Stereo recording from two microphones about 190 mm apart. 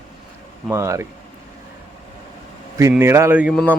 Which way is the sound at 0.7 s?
15° right (ahead or behind).